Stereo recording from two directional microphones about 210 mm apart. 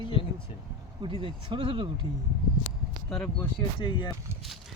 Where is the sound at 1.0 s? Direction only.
25° right (ahead or behind).